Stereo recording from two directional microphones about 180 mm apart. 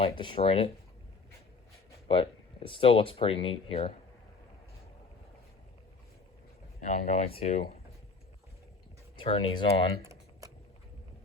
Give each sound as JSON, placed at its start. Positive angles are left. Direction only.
{"t": 0.0, "sound": "speech", "side_deg": 30}
{"t": 2.0, "sound": "speech", "side_deg": 30}
{"t": 6.8, "sound": "speech", "side_deg": 50}
{"t": 7.3, "sound": "speech", "side_deg": 35}
{"t": 9.1, "sound": "speech", "side_deg": 30}
{"t": 10.0, "sound": "typing", "side_deg": -15}